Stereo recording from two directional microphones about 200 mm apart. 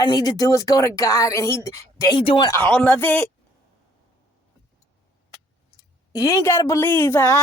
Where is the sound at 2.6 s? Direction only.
5° left (ahead or behind).